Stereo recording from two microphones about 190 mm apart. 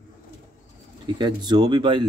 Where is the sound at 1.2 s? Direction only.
20° right (ahead or behind).